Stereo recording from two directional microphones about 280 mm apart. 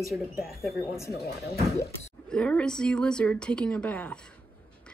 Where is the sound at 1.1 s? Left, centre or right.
Left.